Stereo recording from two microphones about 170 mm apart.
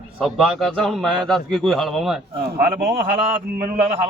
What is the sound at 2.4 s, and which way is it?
Speech, 60° right (ahead or behind).